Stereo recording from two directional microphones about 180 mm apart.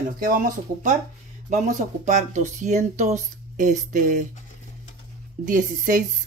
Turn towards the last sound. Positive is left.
turn(degrees=-45)  # may be behind; listen again after turning